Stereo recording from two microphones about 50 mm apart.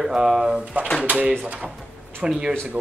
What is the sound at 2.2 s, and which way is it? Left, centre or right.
Speech, centre.